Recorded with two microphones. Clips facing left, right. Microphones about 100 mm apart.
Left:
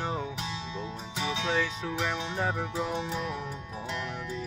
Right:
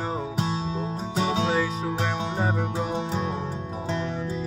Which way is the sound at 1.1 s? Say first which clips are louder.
Right 8 dB; 40° right (ahead or behind).